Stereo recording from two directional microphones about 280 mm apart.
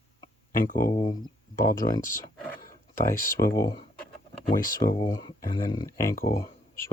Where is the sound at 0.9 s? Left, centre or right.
Centre.